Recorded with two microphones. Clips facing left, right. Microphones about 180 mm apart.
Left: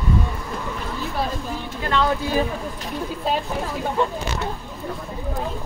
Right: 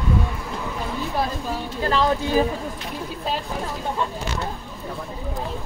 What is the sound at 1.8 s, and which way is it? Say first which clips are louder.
Speech: right 1 dB; 30° right (ahead or behind).